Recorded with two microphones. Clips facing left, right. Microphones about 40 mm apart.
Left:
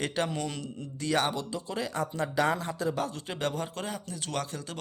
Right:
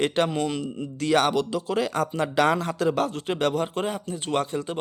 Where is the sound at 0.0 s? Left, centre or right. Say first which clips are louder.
Right 7 dB; right.